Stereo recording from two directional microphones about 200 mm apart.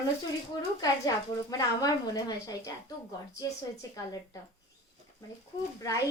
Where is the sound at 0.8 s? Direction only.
20° left (ahead or behind).